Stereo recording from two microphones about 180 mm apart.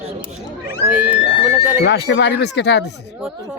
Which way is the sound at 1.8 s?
70° left (ahead or behind).